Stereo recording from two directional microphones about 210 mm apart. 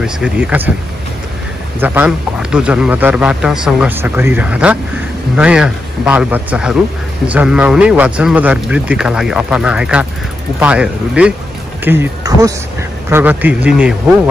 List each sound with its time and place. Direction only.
0.0 s a man's voice: 5° right (ahead or behind)
1.8 s a man's voice: 5° right (ahead or behind)